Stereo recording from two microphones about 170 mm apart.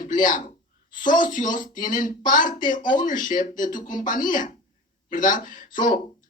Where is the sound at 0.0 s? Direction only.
50° left (ahead or behind).